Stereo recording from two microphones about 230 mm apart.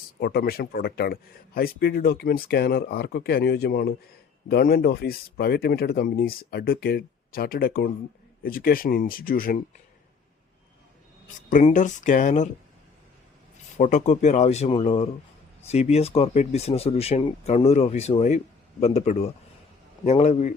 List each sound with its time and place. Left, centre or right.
0.2 s speech: left
11.3 s speech: left
13.7 s speech: left